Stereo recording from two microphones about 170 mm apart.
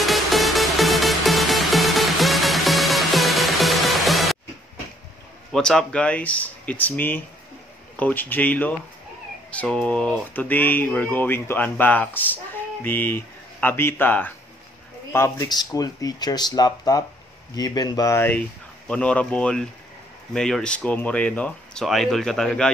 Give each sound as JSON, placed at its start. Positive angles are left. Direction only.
{"t": 0.0, "sound": "music", "side_deg": 0}
{"t": 5.5, "sound": "speech", "side_deg": 5}